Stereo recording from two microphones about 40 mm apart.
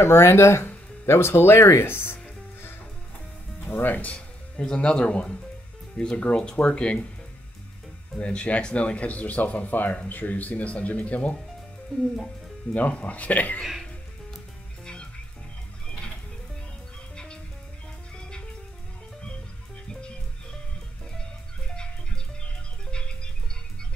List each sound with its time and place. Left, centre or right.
0.1 s speech: left
3.6 s speech: left
4.6 s speech: left
8.2 s speech: left
11.9 s speech: centre
12.7 s speech: left
17.1 s music: left
21.2 s music: left